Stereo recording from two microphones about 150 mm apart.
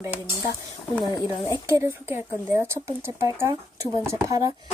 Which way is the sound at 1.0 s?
25° left (ahead or behind).